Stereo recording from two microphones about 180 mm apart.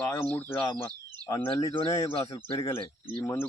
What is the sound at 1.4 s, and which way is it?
Speech, 30° left (ahead or behind).